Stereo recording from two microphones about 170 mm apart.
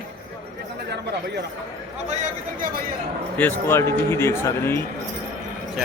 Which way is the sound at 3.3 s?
10° left (ahead or behind).